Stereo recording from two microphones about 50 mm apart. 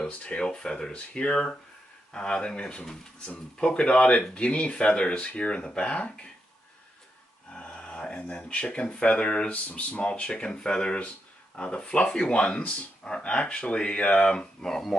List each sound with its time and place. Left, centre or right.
0.0 s speech: left
7.5 s speech: left; by 15.0 s centre